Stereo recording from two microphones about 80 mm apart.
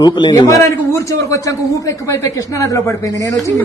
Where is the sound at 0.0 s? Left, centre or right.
Left.